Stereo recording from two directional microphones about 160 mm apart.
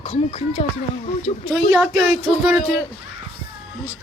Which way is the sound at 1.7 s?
5° right (ahead or behind).